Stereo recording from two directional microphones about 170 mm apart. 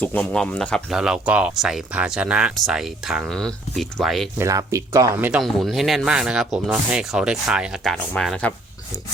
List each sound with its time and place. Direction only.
0.0 s speech: 10° left (ahead or behind)
4.4 s speech: 20° right (ahead or behind)
5.3 s speech: centre (ahead or behind)